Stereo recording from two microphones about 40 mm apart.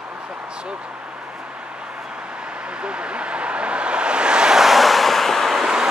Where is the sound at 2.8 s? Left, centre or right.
Right.